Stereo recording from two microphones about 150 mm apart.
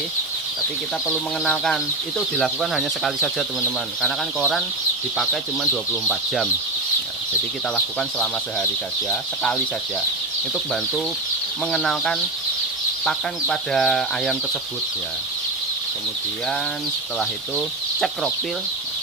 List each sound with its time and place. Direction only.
1.0 s speech: centre (ahead or behind)
7.9 s speech: 5° left (ahead or behind)
17.2 s speech: 5° left (ahead or behind)